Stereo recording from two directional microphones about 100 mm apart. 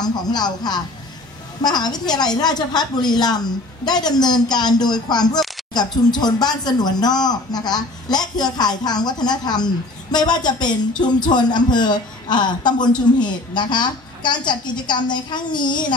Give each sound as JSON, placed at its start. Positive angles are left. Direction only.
{"t": 0.0, "sound": "speech", "side_deg": 45}